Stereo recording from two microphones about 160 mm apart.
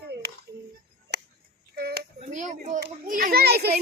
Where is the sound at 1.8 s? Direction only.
80° right.